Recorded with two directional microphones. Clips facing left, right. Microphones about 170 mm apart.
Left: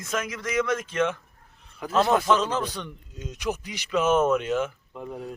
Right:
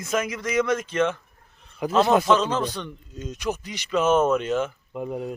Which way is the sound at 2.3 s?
10° left (ahead or behind).